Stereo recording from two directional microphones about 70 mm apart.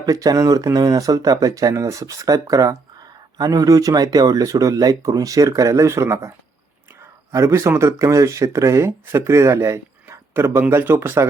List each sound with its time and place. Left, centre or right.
0.0 s speech: right